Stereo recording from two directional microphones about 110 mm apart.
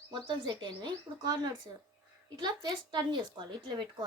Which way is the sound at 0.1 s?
45° right (ahead or behind).